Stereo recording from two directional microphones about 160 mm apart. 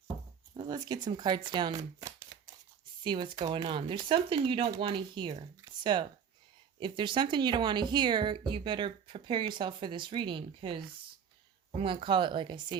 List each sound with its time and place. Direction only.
0.5 s speech: 25° right (ahead or behind)
5.6 s a sound: 30° right (ahead or behind)
6.7 s speech: 30° right (ahead or behind)